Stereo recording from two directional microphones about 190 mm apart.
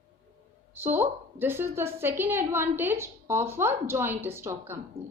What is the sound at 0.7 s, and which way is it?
A woman's voice, 10° right (ahead or behind).